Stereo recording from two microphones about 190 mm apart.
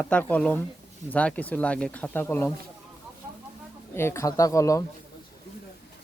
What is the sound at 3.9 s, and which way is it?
Speech, 15° left (ahead or behind).